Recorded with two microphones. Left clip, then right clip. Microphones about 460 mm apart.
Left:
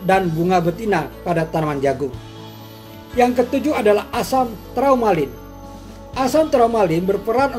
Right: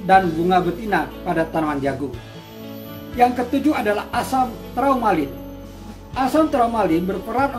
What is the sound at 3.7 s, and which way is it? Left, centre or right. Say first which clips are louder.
A man's voice: left 4 dB; centre.